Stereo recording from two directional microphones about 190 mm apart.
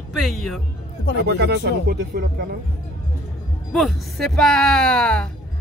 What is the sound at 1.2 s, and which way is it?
Speech, 60° right (ahead or behind).